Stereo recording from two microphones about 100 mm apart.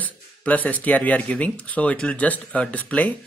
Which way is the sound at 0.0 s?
15° left (ahead or behind).